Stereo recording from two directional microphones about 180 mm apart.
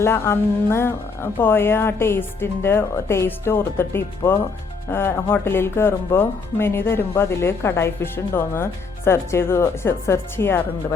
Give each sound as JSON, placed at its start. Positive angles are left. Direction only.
{"t": 0.0, "sound": "speech", "side_deg": 15}